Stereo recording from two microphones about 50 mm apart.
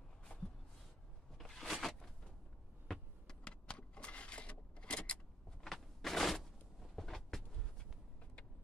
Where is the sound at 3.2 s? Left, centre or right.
Centre.